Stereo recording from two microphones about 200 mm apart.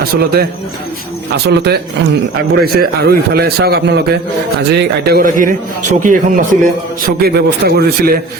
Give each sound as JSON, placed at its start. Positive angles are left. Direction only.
{"t": 0.0, "sound": "a man's voice", "side_deg": -50}
{"t": 1.5, "sound": "a man's voice", "side_deg": -55}
{"t": 7.0, "sound": "a man's voice", "side_deg": -50}